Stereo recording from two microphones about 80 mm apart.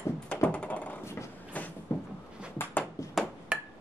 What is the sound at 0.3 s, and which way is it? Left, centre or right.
Typing, centre.